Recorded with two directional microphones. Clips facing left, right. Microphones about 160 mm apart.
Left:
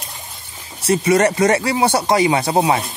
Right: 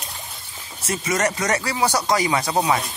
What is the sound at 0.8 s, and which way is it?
Speech, 35° left (ahead or behind).